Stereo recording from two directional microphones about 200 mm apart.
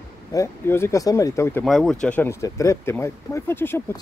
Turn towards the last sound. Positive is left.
turn(degrees=10)  # may be behind; listen again after turning